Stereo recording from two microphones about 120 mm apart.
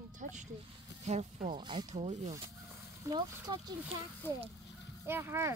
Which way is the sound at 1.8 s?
70° right (ahead or behind).